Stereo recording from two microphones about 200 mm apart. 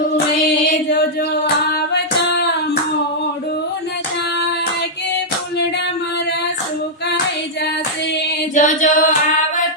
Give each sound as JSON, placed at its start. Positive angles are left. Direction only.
{"t": 8.5, "sound": "singing", "side_deg": 40}